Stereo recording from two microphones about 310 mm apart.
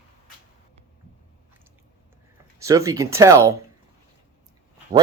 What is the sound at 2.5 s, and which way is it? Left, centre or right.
Speech, centre.